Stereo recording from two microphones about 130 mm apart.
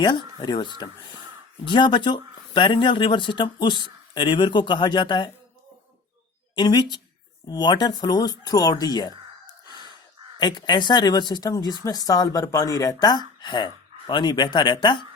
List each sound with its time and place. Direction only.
0.0 s speech: 35° left (ahead or behind)
6.6 s speech: 35° left (ahead or behind)